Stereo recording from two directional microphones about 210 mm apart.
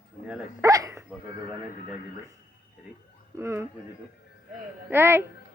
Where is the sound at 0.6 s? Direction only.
15° right (ahead or behind).